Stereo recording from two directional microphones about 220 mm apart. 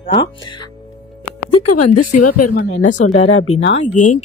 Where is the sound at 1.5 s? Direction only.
90° left.